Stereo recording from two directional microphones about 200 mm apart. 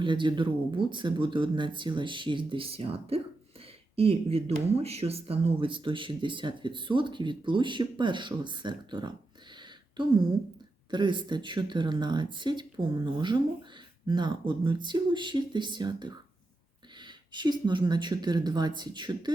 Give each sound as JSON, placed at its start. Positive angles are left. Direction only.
{"t": 0.0, "sound": "speech", "side_deg": -25}
{"t": 9.6, "sound": "a sound", "side_deg": -25}
{"t": 10.9, "sound": "speech", "side_deg": -25}